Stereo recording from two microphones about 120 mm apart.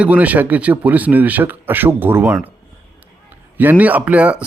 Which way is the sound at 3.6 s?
15° right (ahead or behind).